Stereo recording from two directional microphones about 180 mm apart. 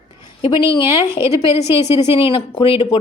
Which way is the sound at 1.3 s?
15° right (ahead or behind).